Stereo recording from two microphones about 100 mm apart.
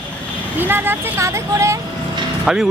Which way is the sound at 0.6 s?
20° right (ahead or behind).